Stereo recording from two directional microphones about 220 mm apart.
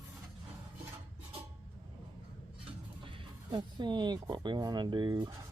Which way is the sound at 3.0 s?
25° right (ahead or behind).